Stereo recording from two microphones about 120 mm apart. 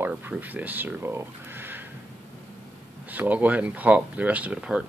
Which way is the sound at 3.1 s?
15° right (ahead or behind).